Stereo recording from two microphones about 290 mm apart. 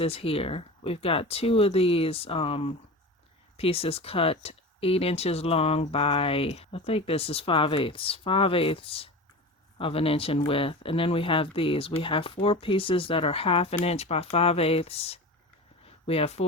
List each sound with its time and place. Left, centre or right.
0.0 s speech: centre